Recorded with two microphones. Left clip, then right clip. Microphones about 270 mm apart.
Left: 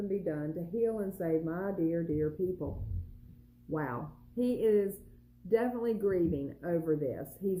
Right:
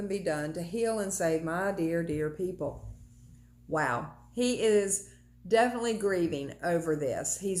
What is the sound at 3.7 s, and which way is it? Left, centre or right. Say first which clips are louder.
Speech: right 7 dB; centre.